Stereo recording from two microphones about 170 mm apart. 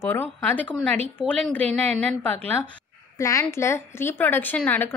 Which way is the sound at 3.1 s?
20° left (ahead or behind).